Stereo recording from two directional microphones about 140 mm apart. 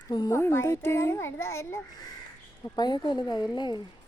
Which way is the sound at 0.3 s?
20° left (ahead or behind).